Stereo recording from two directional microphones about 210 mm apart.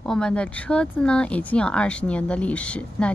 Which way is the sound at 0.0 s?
5° left (ahead or behind).